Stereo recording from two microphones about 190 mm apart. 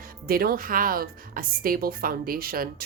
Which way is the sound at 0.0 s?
50° right (ahead or behind).